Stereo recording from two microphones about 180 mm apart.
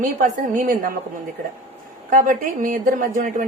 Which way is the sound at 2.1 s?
50° right (ahead or behind).